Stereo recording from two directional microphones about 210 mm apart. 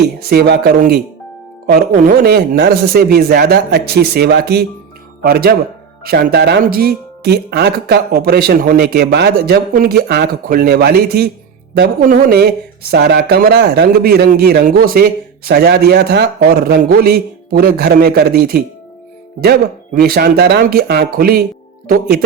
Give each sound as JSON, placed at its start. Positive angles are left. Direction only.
{"t": 0.3, "sound": "speech", "side_deg": -50}